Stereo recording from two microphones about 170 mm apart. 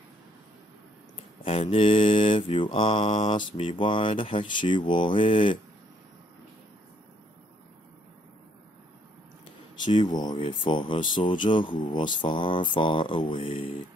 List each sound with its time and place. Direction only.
1.1 s mantra: 35° left (ahead or behind)
9.8 s mantra: 25° left (ahead or behind)